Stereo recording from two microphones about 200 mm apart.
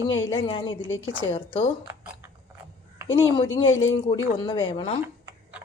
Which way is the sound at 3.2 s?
25° left (ahead or behind).